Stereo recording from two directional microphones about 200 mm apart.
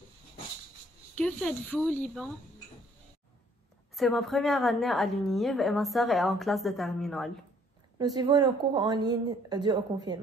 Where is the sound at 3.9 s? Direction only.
Centre (ahead or behind).